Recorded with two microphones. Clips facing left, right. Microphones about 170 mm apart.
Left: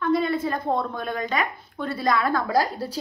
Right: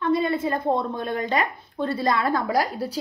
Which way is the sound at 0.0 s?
25° right (ahead or behind).